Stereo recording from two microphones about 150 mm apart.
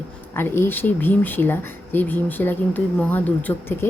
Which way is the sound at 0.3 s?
15° left (ahead or behind).